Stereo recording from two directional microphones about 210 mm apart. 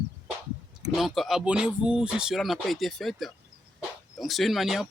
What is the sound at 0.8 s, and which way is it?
Speech, centre (ahead or behind).